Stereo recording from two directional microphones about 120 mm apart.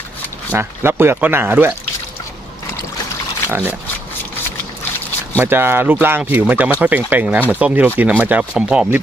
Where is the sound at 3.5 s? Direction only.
20° right (ahead or behind).